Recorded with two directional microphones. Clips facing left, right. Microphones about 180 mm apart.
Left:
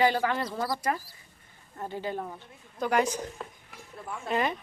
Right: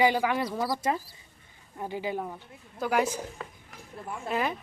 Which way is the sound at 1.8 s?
10° right (ahead or behind).